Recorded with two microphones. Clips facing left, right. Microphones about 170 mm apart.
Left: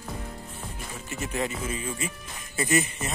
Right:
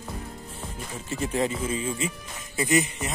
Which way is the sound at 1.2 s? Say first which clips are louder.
Right 4 dB; 30° right (ahead or behind).